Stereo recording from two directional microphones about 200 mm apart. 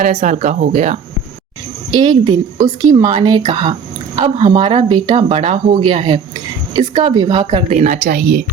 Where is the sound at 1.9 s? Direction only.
20° right (ahead or behind).